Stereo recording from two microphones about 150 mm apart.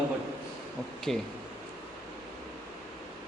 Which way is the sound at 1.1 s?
Centre (ahead or behind).